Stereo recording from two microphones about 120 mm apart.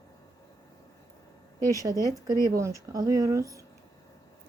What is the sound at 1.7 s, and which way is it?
Speech, 25° right (ahead or behind).